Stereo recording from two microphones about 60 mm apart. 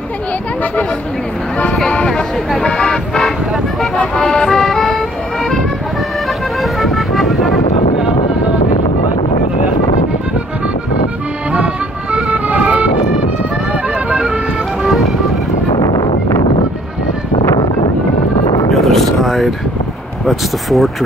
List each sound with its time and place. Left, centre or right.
2.0 s speech: centre
3.2 s speech: centre
4.1 s music: centre
6.6 s vehicle: centre
12.3 s music: right
13.9 s music: right
14.2 s music: centre
18.7 s vehicle: centre
20.2 s speech: centre